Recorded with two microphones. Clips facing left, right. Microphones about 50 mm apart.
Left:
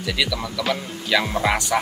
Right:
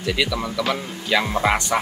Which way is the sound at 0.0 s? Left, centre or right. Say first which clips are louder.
Right 2 dB; centre.